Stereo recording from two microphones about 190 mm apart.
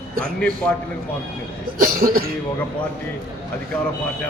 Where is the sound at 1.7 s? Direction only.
50° right (ahead or behind).